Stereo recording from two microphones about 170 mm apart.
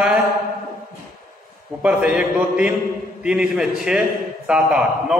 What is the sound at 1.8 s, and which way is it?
A man's voice, 5° right (ahead or behind).